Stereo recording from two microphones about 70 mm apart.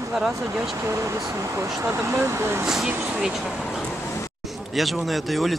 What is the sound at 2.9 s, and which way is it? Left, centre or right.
Speech, right.